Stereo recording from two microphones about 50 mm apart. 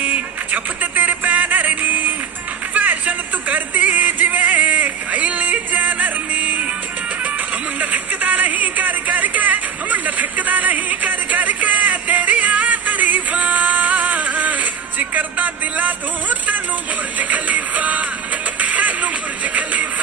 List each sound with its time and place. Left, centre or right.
0.0 s music: right
7.8 s a sound: right
17.2 s music: right